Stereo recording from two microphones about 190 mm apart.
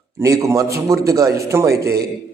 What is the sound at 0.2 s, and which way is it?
A man's voice, 15° right (ahead or behind).